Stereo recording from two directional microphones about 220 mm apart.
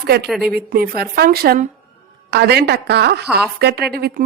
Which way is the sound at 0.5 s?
45° right (ahead or behind).